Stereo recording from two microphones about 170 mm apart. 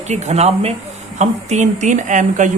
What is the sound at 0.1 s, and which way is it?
Speech, 40° right (ahead or behind).